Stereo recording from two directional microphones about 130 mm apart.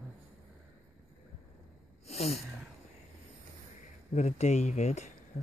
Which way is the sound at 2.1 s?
55° left (ahead or behind).